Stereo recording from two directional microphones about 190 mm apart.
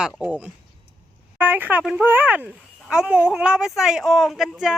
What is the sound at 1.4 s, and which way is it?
Speech, 10° right (ahead or behind).